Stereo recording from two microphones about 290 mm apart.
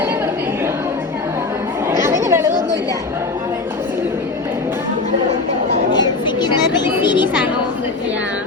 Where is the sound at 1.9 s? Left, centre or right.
Centre.